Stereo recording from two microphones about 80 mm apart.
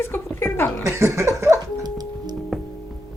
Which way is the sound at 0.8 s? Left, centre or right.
Right.